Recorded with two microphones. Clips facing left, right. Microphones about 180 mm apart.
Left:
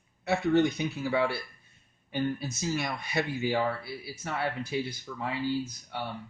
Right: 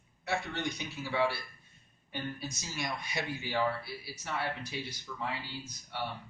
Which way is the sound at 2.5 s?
60° left (ahead or behind).